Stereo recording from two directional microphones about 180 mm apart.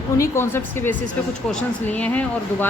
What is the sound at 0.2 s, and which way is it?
Speech, 15° left (ahead or behind).